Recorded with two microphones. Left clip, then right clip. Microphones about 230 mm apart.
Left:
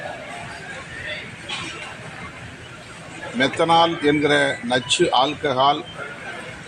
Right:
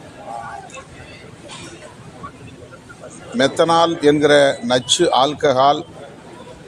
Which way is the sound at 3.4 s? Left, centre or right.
Right.